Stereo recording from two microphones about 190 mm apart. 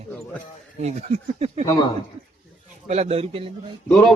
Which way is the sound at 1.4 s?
35° right (ahead or behind).